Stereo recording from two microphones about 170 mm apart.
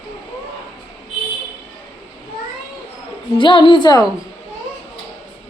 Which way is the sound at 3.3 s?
30° left (ahead or behind).